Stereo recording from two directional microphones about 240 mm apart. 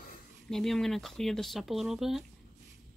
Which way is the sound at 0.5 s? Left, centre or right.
Centre.